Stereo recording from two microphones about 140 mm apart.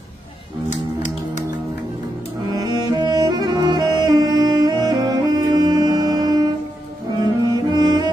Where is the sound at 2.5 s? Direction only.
30° right (ahead or behind).